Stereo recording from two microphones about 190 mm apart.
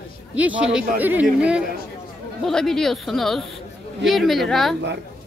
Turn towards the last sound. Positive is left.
turn(degrees=0)  # may be behind; listen again after turning